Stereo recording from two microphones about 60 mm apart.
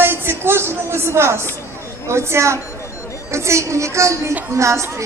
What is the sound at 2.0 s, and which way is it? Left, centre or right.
A woman's voice, right.